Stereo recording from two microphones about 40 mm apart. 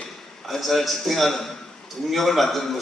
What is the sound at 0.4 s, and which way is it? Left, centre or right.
A man's voice, centre.